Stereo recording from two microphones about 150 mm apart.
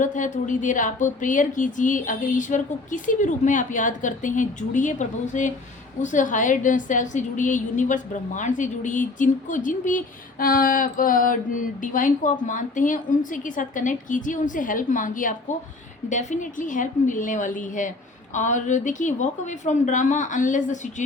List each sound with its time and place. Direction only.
0.0 s a woman's voice: 55° left (ahead or behind)